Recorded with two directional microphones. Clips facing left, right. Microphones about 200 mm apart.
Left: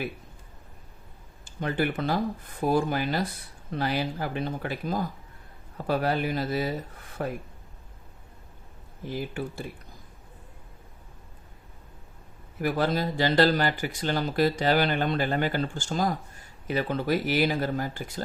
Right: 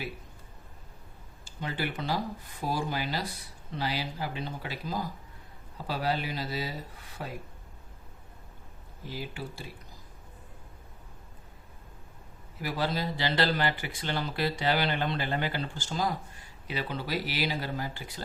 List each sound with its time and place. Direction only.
1.5 s speech: 55° left (ahead or behind)
9.0 s speech: 50° left (ahead or behind)
12.5 s speech: 50° left (ahead or behind)